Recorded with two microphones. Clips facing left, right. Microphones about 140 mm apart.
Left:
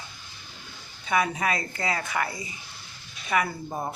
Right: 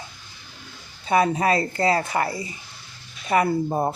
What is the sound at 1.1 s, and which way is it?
Speech, 35° right (ahead or behind).